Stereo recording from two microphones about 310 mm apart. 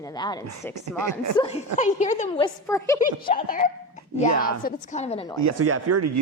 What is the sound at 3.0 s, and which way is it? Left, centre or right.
A woman's voice, left.